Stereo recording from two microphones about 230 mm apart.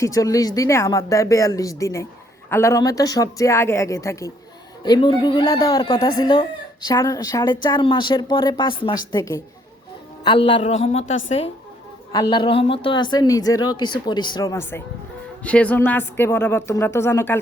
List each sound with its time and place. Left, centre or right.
0.0 s a woman's voice: centre
11.0 s a woman's voice: left
12.1 s a woman's voice: centre